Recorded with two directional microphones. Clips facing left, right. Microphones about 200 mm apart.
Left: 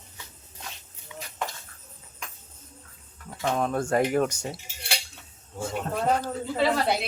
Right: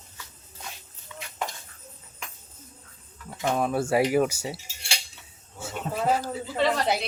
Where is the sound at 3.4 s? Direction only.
5° right (ahead or behind).